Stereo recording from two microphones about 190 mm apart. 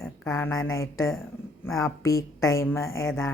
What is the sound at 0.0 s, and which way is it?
A woman's voice, 15° left (ahead or behind).